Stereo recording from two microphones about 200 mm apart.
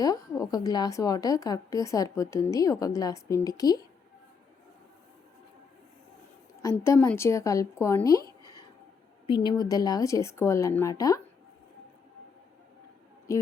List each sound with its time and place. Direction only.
0.0 s a woman's voice: 20° left (ahead or behind)
6.6 s a woman's voice: 15° left (ahead or behind)
9.2 s a woman's voice: 25° left (ahead or behind)